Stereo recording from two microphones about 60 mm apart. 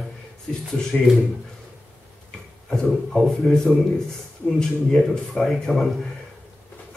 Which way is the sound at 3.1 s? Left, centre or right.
Centre.